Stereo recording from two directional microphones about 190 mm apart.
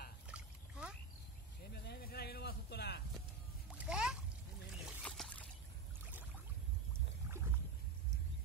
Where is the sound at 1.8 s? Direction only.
55° left (ahead or behind).